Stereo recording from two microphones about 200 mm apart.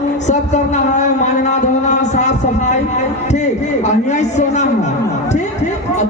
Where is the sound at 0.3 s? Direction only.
35° left (ahead or behind).